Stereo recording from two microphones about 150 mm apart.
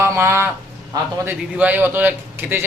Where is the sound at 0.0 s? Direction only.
15° right (ahead or behind).